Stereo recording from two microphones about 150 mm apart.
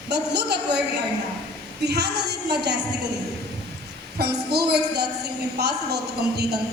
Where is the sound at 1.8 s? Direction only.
90° right.